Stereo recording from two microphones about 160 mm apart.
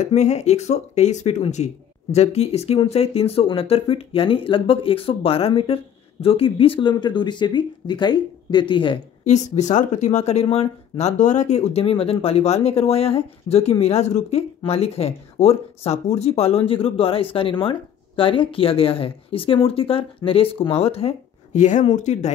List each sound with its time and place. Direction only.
0.0 s speech: 45° left (ahead or behind)
9.2 s speech: 45° left (ahead or behind)